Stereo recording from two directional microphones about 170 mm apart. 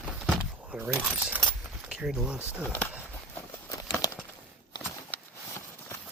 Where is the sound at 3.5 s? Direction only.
20° left (ahead or behind).